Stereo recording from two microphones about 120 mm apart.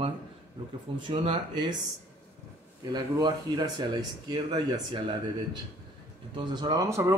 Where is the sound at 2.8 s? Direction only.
35° right (ahead or behind).